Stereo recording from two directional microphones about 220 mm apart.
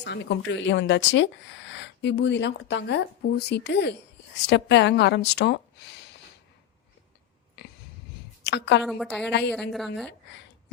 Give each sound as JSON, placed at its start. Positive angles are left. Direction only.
{"t": 0.0, "sound": "speech", "side_deg": 55}
{"t": 8.4, "sound": "a woman's voice", "side_deg": 50}
{"t": 8.8, "sound": "a woman's voice", "side_deg": 0}